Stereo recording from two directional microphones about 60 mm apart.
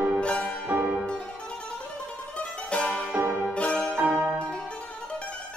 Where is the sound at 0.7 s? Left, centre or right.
Right.